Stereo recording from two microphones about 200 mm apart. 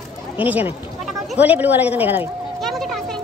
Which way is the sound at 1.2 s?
5° right (ahead or behind).